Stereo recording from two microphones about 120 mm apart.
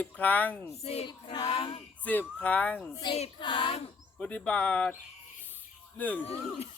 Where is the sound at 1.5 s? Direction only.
50° left (ahead or behind).